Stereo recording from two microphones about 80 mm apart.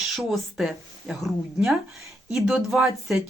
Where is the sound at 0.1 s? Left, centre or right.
Centre.